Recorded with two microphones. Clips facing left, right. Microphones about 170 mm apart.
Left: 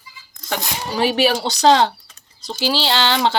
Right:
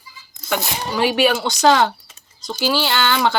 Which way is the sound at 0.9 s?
35° left (ahead or behind).